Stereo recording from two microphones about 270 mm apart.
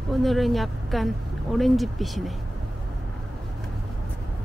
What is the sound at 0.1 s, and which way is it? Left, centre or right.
Speech, centre.